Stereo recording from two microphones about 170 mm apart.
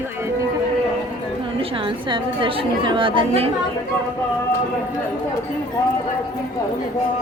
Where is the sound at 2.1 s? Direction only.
30° right (ahead or behind).